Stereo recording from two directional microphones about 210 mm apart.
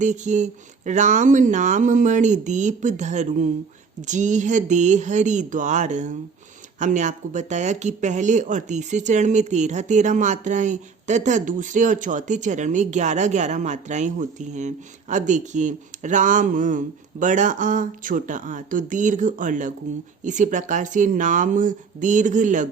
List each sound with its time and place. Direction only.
0.0 s speech: 35° right (ahead or behind)